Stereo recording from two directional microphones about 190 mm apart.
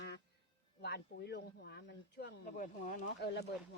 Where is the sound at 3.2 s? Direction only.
60° left (ahead or behind).